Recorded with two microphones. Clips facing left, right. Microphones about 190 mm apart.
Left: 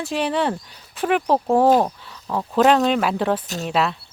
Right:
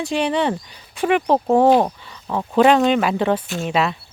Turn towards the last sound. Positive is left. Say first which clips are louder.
# right 1 dB
turn(degrees=0)  # may be behind; listen again after turning